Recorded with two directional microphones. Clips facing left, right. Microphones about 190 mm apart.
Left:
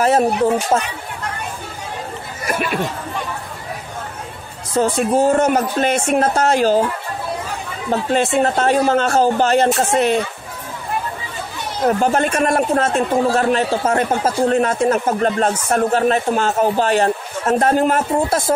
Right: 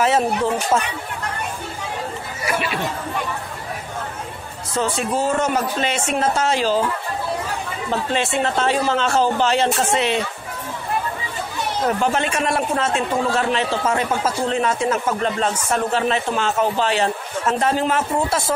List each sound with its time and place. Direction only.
2.4 s a man's voice: 50° left (ahead or behind)
4.7 s a man's voice: 50° left (ahead or behind)
8.1 s a man's voice: 45° left (ahead or behind)
12.0 s a man's voice: 45° left (ahead or behind)